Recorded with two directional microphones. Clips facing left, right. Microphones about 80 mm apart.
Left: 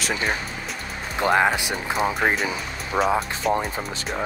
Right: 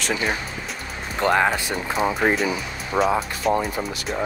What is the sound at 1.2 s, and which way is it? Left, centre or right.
Speech, centre.